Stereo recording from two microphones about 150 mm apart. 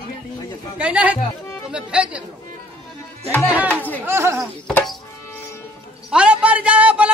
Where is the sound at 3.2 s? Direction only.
10° left (ahead or behind).